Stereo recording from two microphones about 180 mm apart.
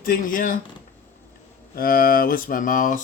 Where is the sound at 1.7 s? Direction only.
50° left (ahead or behind).